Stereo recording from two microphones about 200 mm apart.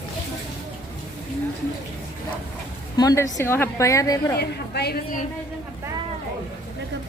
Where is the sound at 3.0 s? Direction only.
15° left (ahead or behind).